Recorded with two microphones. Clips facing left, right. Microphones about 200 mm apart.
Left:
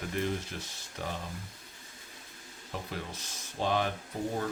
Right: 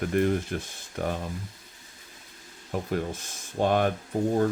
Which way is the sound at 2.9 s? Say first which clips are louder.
Right 10 dB; 50° right (ahead or behind).